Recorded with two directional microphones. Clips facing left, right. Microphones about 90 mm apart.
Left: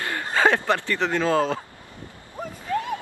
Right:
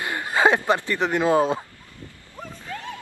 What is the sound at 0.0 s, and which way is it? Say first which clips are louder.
Speech: right 1 dB; 15° right (ahead or behind).